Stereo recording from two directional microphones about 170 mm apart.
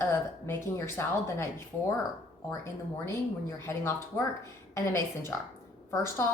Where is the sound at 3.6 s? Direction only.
15° left (ahead or behind).